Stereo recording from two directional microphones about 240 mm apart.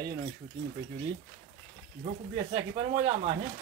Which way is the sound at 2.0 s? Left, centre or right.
Right.